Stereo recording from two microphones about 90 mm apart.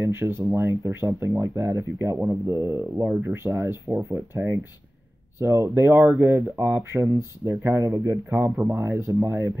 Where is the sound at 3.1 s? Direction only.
20° right (ahead or behind).